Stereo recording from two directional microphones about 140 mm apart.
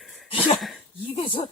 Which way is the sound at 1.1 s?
40° left (ahead or behind).